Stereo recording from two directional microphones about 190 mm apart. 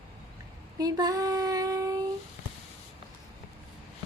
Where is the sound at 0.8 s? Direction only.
20° right (ahead or behind).